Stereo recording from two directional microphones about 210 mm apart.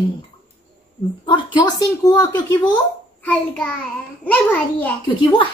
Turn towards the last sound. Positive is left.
turn(degrees=25)  # may be behind; listen again after turning